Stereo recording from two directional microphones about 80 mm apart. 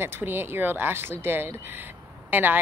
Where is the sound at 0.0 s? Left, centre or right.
Right.